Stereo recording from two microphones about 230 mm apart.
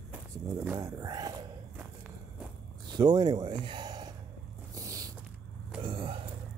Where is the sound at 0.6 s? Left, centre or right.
Centre.